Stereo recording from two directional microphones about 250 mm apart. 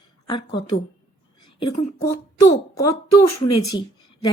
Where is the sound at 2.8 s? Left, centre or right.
Left.